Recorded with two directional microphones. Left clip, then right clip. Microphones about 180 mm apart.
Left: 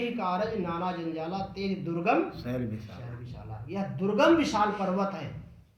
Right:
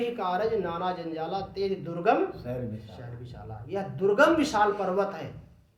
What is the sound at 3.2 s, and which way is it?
A man's voice, 30° right (ahead or behind).